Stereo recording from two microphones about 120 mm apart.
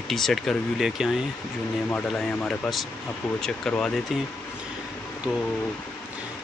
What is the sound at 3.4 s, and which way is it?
Speech, 5° left (ahead or behind).